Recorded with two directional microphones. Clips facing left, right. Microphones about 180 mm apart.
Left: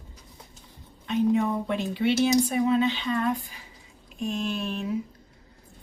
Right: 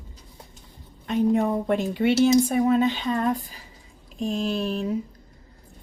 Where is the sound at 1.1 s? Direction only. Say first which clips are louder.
Right 2 dB; 45° right (ahead or behind).